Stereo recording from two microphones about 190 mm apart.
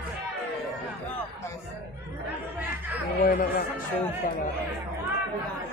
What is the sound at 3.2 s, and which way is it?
Speech, 50° left (ahead or behind).